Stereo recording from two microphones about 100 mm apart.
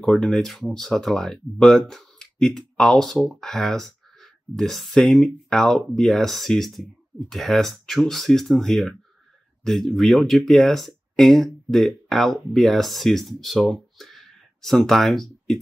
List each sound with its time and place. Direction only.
0.0 s speech: 5° left (ahead or behind)